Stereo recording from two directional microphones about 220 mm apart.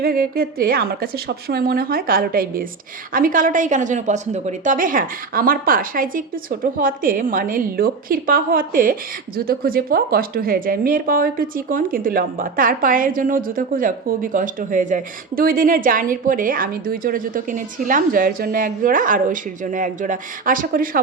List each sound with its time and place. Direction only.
0.0 s a woman's voice: 40° right (ahead or behind)